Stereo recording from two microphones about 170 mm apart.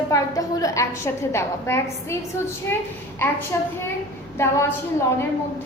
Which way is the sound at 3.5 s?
15° left (ahead or behind).